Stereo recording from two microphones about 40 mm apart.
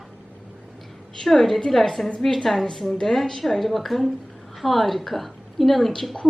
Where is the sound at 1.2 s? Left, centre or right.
Centre.